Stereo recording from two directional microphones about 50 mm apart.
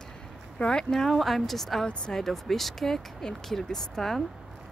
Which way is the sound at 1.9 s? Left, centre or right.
Centre.